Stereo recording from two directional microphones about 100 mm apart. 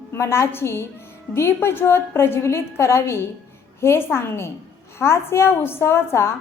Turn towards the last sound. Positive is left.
turn(degrees=25)  # may be behind; listen again after turning